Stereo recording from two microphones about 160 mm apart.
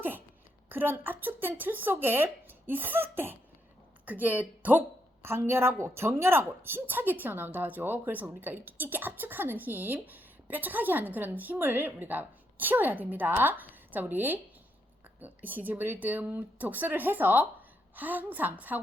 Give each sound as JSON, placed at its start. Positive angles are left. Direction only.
{"t": 0.7, "sound": "a woman's voice", "side_deg": -15}